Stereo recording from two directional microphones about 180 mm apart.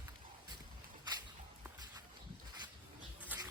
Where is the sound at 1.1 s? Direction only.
20° right (ahead or behind).